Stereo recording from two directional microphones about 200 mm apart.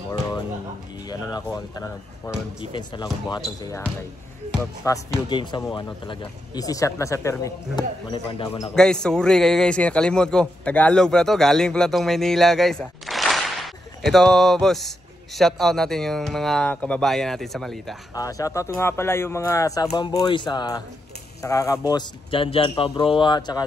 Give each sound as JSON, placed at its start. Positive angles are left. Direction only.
{"t": 1.0, "sound": "speech", "side_deg": 20}
{"t": 4.8, "sound": "speech", "side_deg": 20}
{"t": 8.7, "sound": "a man's voice", "side_deg": 5}
{"t": 18.1, "sound": "speech", "side_deg": 15}